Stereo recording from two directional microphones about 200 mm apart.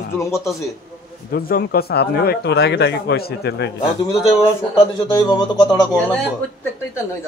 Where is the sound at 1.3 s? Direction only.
50° left (ahead or behind).